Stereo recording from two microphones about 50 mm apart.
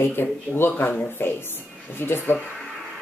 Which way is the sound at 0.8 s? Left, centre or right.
Left.